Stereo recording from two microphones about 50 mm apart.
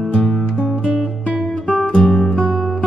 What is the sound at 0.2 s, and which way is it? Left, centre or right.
Music, centre.